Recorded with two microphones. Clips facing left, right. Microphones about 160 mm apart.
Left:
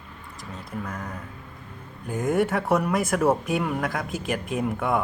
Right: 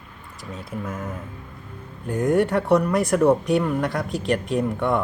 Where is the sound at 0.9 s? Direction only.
5° right (ahead or behind).